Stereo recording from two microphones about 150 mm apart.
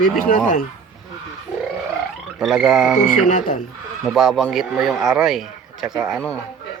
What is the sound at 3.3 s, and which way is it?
Speech, 60° left (ahead or behind).